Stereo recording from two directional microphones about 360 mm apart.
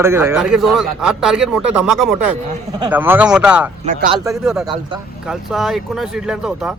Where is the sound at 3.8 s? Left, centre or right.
Right.